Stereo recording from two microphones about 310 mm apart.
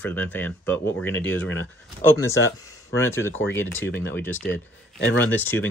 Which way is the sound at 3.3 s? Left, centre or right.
Left.